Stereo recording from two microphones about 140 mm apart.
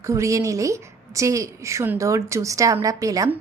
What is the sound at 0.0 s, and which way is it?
A woman's voice, 20° right (ahead or behind).